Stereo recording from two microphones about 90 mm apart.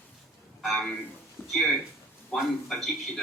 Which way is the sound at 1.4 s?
20° left (ahead or behind).